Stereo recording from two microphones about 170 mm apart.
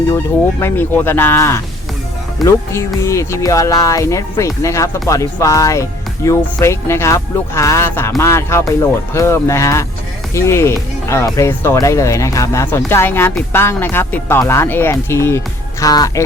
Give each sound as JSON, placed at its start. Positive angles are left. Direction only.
{"t": 0.6, "sound": "speech", "side_deg": 10}